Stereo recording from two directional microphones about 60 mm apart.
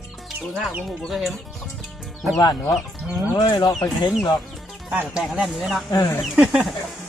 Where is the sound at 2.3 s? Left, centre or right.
Left.